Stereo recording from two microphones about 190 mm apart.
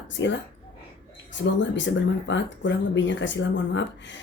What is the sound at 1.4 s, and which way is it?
Speech, 75° left (ahead or behind).